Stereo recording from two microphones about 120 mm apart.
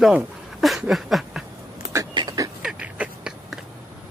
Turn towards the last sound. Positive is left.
turn(degrees=-10)  # may be behind; listen again after turning